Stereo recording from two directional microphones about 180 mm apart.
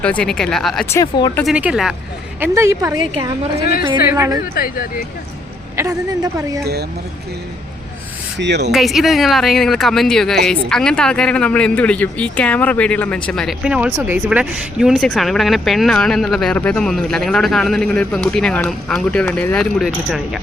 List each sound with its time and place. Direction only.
0.0 s speech: 5° left (ahead or behind)
0.9 s speech: 15° left (ahead or behind)
1.5 s speech: 5° right (ahead or behind)
2.4 s a woman's voice: 15° right (ahead or behind)
3.6 s speech: 55° left (ahead or behind)
4.1 s a woman's voice: 15° right (ahead or behind)
4.5 s speech: 55° left (ahead or behind)
8.4 s speech: 70° right (ahead or behind)
8.7 s speech: centre (ahead or behind)